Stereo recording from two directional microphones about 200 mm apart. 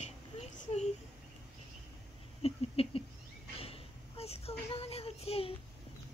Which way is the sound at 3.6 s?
30° left (ahead or behind).